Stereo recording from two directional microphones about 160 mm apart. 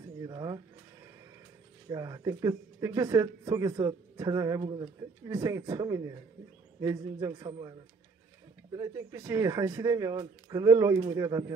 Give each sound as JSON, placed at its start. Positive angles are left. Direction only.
{"t": 0.2, "sound": "a sound", "side_deg": -25}
{"t": 1.9, "sound": "speech", "side_deg": -25}
{"t": 8.7, "sound": "speech", "side_deg": -25}